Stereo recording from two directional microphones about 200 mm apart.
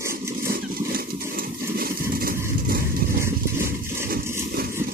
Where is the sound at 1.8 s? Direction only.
50° right (ahead or behind).